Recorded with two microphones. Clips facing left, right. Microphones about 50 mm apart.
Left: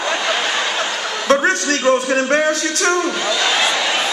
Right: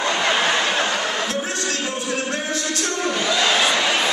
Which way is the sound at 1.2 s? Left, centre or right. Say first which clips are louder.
Left 9 dB; left.